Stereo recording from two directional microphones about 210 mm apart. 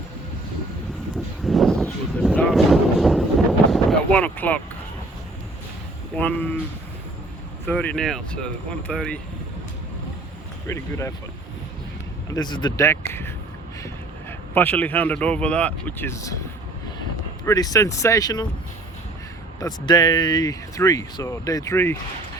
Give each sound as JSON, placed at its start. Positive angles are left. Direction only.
{"t": 1.5, "sound": "a sound", "side_deg": 0}
{"t": 6.1, "sound": "speech", "side_deg": 10}
{"t": 7.7, "sound": "speech", "side_deg": 5}
{"t": 10.7, "sound": "speech", "side_deg": 15}
{"t": 12.3, "sound": "speech", "side_deg": 20}
{"t": 17.4, "sound": "speech", "side_deg": 15}
{"t": 19.5, "sound": "speech", "side_deg": 20}